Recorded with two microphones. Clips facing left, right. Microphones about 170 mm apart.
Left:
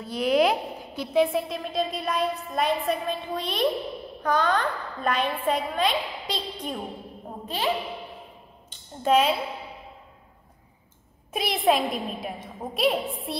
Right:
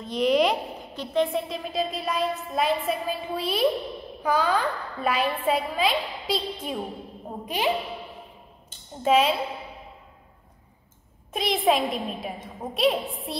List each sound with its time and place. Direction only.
0.0 s a woman's voice: 5° left (ahead or behind)
7.4 s a woman's voice: 15° right (ahead or behind)
9.0 s a woman's voice: centre (ahead or behind)
11.3 s a woman's voice: centre (ahead or behind)